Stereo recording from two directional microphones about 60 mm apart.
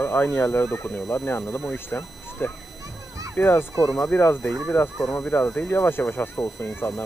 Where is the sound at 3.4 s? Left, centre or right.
Left.